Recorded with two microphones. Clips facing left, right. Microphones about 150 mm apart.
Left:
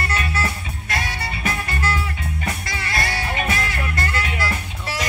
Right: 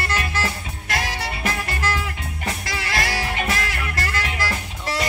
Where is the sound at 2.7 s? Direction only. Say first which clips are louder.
Right 1 dB; 90° right.